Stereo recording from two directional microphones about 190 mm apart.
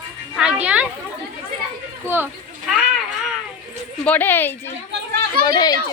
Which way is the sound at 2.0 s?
10° right (ahead or behind).